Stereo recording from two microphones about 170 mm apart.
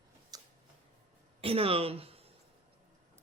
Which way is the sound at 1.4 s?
35° right (ahead or behind).